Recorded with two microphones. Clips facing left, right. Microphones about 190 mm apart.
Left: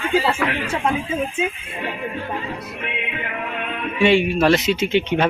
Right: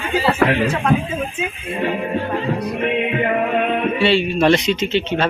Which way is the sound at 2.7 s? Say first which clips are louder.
Right 10 dB; 50° right (ahead or behind).